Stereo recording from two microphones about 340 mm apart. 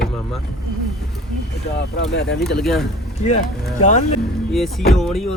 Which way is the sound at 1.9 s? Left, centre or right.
Left.